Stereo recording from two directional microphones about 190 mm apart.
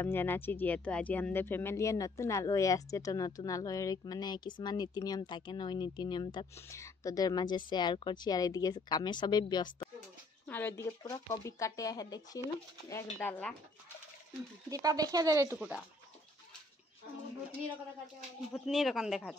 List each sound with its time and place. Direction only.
0.0 s speech: 10° left (ahead or behind)
10.4 s speech: 10° left (ahead or behind)
14.7 s speech: 20° right (ahead or behind)
15.5 s speech: 5° right (ahead or behind)
18.5 s speech: centre (ahead or behind)